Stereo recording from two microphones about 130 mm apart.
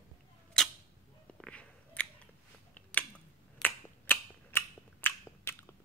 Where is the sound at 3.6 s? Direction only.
15° left (ahead or behind).